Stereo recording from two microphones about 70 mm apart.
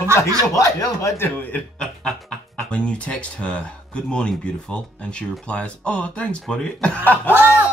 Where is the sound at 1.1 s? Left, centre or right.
Left.